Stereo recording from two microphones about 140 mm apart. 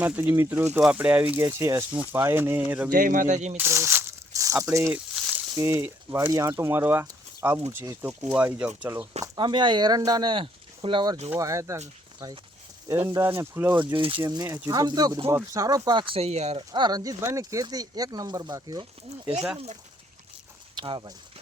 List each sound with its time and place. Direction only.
0.0 s speech: 15° right (ahead or behind)
2.9 s speech: 80° right; by 3.6 s 55° right (ahead or behind)
3.6 s a sound: 20° right (ahead or behind)
5.5 s speech: 20° right (ahead or behind)
9.2 s speech: 30° right (ahead or behind)
11.3 s speech: 25° right (ahead or behind)
12.9 s speech: 20° right (ahead or behind)
13.9 s speech: 40° right (ahead or behind)
14.2 s speech: 25° right (ahead or behind)
16.1 s speech: 50° right (ahead or behind)
16.7 s speech: 30° right (ahead or behind)
20.7 s speech: 35° right (ahead or behind)